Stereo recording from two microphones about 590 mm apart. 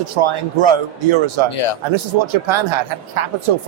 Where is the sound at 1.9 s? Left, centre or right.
Right.